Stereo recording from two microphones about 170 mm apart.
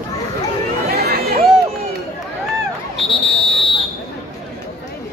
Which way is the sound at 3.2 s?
35° left (ahead or behind).